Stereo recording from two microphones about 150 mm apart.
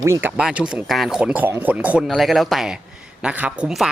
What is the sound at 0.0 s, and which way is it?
A man's voice, 15° right (ahead or behind).